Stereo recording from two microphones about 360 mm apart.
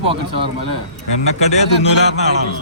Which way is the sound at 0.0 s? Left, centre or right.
Centre.